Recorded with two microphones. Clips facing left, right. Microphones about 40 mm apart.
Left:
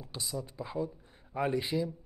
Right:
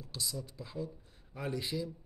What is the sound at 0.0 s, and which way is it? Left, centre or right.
Speech, left.